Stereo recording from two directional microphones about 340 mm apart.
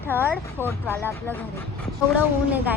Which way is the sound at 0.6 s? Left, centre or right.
Centre.